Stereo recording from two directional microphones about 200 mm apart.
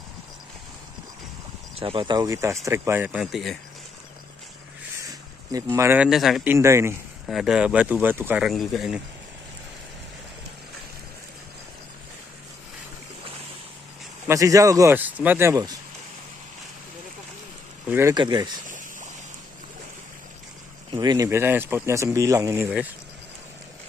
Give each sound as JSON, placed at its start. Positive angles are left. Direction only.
{"t": 1.8, "sound": "speech", "side_deg": -25}
{"t": 5.5, "sound": "speech", "side_deg": -15}
{"t": 7.2, "sound": "speech", "side_deg": 0}
{"t": 14.2, "sound": "speech", "side_deg": -15}
{"t": 17.8, "sound": "speech", "side_deg": -10}
{"t": 18.1, "sound": "speech", "side_deg": -20}
{"t": 20.9, "sound": "speech", "side_deg": -20}